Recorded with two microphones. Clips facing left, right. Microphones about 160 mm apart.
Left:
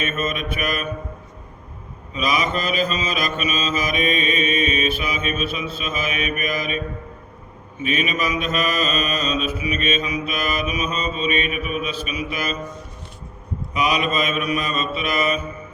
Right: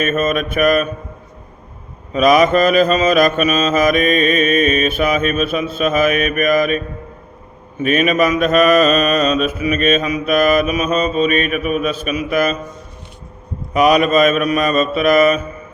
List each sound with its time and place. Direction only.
0.0 s mantra: 45° right (ahead or behind)
2.1 s mantra: 50° right (ahead or behind)
13.7 s mantra: 50° right (ahead or behind)